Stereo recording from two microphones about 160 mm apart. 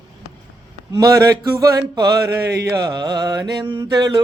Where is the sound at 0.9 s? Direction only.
25° right (ahead or behind).